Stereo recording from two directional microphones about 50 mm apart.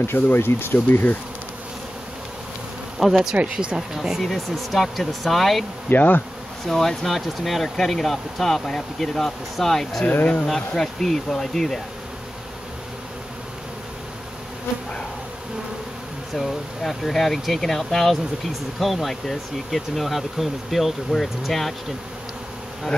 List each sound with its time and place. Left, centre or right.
0.0 s speech: left
3.0 s speech: centre
3.3 s speech: right
3.7 s speech: centre
4.2 s speech: centre
5.9 s bee: left
6.6 s speech: centre
16.3 s speech: centre